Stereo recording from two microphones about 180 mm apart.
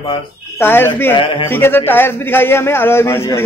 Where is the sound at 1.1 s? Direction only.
30° left (ahead or behind).